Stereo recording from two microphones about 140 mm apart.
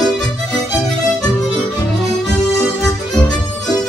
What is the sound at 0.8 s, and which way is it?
Music, 5° left (ahead or behind).